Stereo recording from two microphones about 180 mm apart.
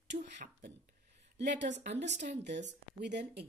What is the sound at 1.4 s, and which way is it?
Speech, 75° right (ahead or behind).